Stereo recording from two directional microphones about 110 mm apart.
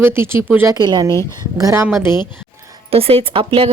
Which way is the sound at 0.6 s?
40° right (ahead or behind).